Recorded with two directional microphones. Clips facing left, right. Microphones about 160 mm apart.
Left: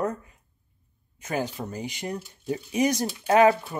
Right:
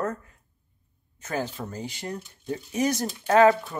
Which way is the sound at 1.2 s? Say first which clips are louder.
Left 1 dB; 15° left (ahead or behind).